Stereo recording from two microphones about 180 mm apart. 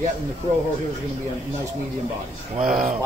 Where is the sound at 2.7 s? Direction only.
50° right (ahead or behind).